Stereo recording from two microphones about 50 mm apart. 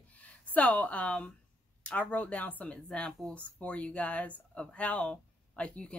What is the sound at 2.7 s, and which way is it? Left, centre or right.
A woman's voice, centre.